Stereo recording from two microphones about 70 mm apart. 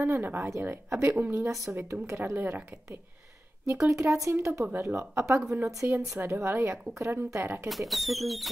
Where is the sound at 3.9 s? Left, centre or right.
Right.